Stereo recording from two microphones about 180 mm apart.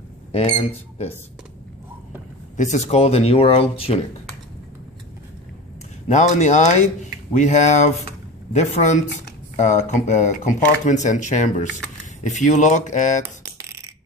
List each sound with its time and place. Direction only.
0.3 s speech: 35° left (ahead or behind)
2.5 s speech: 40° left (ahead or behind)
6.0 s speech: 40° left (ahead or behind)
13.2 s coin: 15° right (ahead or behind)